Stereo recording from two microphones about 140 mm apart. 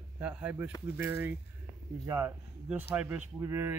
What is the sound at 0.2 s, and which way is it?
Speech, 10° right (ahead or behind).